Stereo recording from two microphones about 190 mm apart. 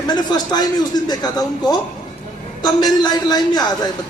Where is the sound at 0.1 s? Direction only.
20° left (ahead or behind).